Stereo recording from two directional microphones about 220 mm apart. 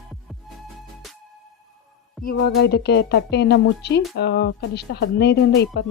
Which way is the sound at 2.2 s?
45° left (ahead or behind).